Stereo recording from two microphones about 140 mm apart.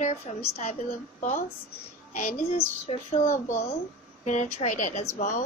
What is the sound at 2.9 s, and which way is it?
Speech, 50° left (ahead or behind).